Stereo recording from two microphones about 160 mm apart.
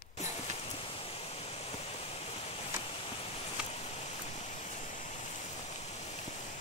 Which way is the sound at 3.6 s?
5° right (ahead or behind).